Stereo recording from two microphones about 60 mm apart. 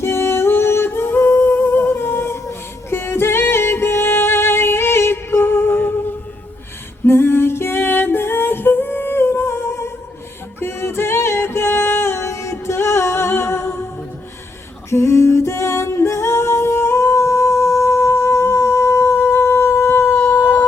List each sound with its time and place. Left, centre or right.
0.0 s humming: left
7.0 s female singing: left
10.6 s music: left
14.8 s a capella: left